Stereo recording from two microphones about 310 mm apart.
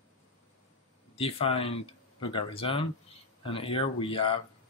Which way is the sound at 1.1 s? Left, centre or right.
Centre.